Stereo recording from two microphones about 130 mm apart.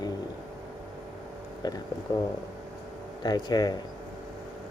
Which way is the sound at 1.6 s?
30° left (ahead or behind).